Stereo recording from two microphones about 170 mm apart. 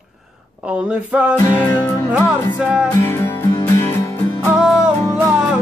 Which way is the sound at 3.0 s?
15° left (ahead or behind).